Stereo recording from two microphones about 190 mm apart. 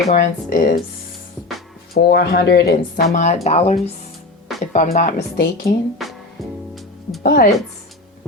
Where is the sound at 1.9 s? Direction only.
55° left (ahead or behind).